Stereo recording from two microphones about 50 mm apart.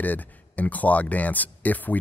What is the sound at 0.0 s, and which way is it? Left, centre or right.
Speech, left.